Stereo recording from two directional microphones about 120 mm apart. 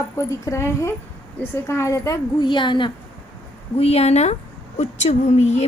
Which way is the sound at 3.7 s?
60° left (ahead or behind).